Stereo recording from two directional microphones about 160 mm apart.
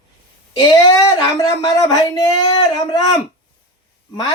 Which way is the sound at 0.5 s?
20° left (ahead or behind).